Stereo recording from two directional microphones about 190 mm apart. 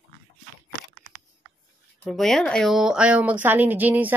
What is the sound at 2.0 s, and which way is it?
Speech, centre (ahead or behind).